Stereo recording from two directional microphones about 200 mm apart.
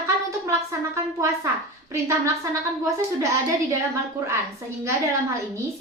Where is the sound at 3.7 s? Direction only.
15° right (ahead or behind).